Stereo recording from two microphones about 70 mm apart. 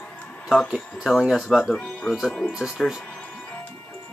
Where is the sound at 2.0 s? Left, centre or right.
Centre.